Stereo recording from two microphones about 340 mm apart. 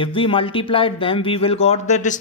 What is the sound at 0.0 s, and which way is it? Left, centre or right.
Speech, centre.